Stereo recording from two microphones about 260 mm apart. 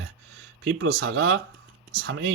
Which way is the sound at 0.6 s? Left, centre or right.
Right.